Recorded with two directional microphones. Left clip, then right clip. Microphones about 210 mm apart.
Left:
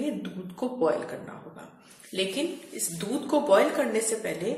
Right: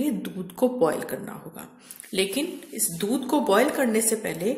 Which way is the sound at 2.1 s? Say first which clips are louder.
Right 3 dB; 50° right (ahead or behind).